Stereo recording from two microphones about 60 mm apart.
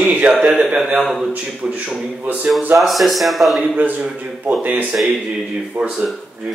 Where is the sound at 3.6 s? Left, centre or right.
Right.